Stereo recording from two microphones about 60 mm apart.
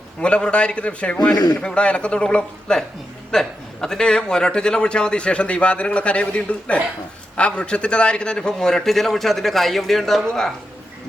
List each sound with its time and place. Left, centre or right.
0.2 s a man's voice: centre